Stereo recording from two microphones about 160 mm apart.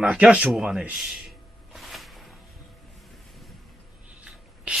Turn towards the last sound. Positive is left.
turn(degrees=-5)  # may be behind; listen again after turning